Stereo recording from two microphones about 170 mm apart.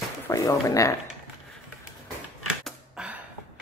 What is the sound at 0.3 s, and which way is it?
Speech, 20° left (ahead or behind).